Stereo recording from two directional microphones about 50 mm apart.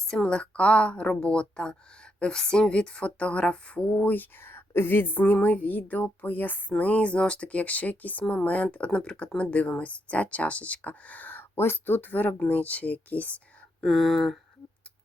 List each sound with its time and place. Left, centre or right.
0.1 s speech: centre; by 11.9 s left
11.9 s speech: left
13.8 s speech: centre